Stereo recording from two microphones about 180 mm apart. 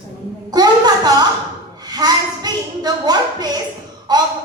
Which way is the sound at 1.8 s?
20° right (ahead or behind).